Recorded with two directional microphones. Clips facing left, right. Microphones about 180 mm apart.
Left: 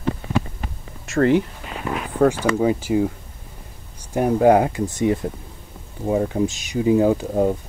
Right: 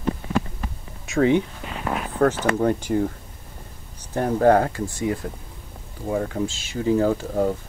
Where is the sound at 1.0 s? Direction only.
Centre (ahead or behind).